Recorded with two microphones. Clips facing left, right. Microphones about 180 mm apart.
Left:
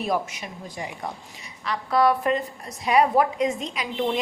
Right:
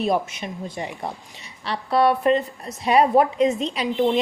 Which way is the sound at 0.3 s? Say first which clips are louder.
Right 5 dB; 25° right (ahead or behind).